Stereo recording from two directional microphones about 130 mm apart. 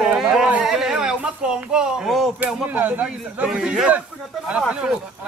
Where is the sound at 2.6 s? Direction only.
15° right (ahead or behind).